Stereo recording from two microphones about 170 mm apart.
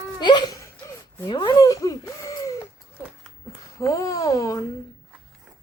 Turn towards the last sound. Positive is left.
turn(degrees=20)  # may be behind; listen again after turning